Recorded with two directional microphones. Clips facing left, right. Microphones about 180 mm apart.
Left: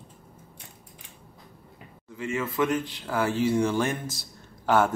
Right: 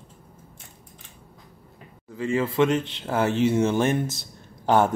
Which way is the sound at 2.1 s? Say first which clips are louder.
Right 5 dB; 35° right (ahead or behind).